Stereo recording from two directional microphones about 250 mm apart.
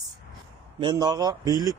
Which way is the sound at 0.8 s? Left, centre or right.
Centre.